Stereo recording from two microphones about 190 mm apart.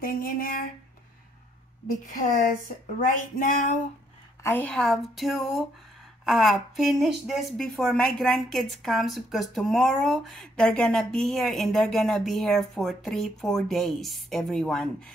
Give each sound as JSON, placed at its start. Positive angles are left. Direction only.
{"t": 0.0, "sound": "speech", "side_deg": 50}
{"t": 3.0, "sound": "speech", "side_deg": 45}
{"t": 4.4, "sound": "a woman's voice", "side_deg": 10}